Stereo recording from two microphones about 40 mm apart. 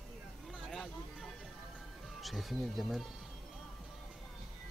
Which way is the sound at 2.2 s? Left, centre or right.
Centre.